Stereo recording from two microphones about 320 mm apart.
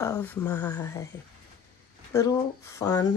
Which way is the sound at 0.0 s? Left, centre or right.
Centre.